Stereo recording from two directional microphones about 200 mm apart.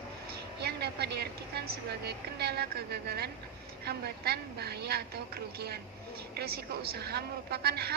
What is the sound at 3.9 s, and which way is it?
A woman's voice, 55° right (ahead or behind).